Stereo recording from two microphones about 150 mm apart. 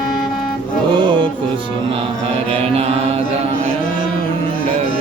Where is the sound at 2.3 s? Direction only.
45° right (ahead or behind).